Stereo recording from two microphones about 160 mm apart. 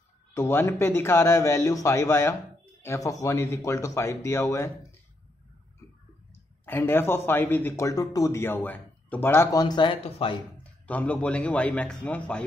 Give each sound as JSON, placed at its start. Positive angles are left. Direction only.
{"t": 0.3, "sound": "speech", "side_deg": 15}
{"t": 6.6, "sound": "speech", "side_deg": 15}
{"t": 10.6, "sound": "speech", "side_deg": 10}